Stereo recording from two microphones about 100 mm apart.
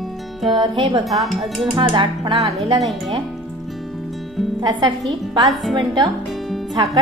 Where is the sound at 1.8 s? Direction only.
55° right (ahead or behind).